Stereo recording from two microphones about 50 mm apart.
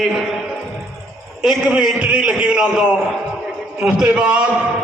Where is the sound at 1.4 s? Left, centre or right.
Centre.